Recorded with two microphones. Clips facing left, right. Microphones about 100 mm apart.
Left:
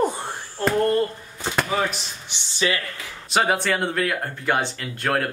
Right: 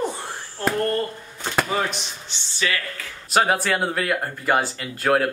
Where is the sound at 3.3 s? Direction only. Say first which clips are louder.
Right 1 dB; centre (ahead or behind).